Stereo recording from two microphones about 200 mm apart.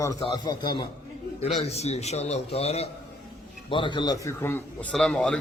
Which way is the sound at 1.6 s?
30° left (ahead or behind).